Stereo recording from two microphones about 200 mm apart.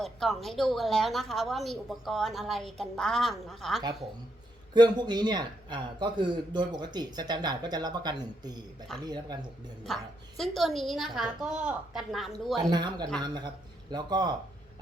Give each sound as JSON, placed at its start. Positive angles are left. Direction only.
{"t": 0.0, "sound": "a woman's voice", "side_deg": 0}
{"t": 4.7, "sound": "a man's voice", "side_deg": -20}
{"t": 9.8, "sound": "a woman's voice", "side_deg": 0}
{"t": 12.7, "sound": "a man's voice", "side_deg": -20}